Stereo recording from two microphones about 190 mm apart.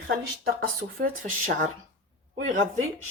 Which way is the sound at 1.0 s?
40° right (ahead or behind).